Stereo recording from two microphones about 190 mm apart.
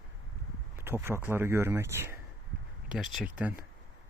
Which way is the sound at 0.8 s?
10° right (ahead or behind).